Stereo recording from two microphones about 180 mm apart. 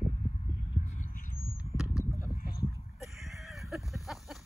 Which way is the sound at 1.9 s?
15° left (ahead or behind).